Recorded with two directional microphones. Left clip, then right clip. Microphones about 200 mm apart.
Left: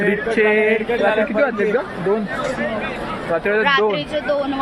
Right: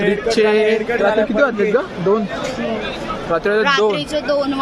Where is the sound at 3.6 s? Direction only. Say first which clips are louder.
Right 1 dB; 35° right (ahead or behind).